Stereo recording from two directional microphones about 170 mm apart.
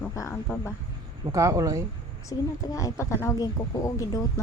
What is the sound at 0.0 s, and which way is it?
Speech, 15° left (ahead or behind).